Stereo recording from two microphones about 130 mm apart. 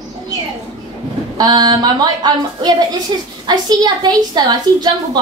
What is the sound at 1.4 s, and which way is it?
A woman's voice, 30° right (ahead or behind).